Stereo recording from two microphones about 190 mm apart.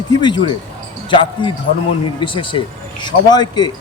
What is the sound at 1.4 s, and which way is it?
A man's voice, 25° left (ahead or behind).